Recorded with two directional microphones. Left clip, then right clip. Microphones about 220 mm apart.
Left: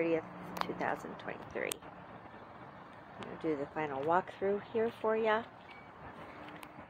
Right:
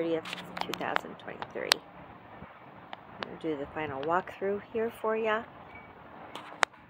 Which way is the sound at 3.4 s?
10° right (ahead or behind).